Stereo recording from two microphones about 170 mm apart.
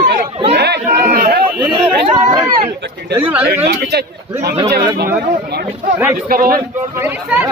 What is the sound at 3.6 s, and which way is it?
Speech, 75° right (ahead or behind).